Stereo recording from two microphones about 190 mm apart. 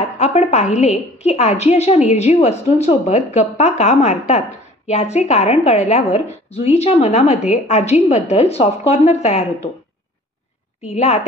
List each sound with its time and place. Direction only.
0.2 s a woman's voice: 35° left (ahead or behind)
10.9 s a woman's voice: 35° left (ahead or behind)